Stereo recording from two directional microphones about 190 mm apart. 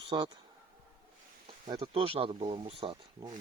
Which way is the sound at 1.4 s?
30° right (ahead or behind).